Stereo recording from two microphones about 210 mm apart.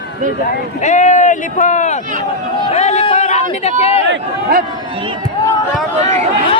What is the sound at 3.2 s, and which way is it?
Speech, 30° left (ahead or behind).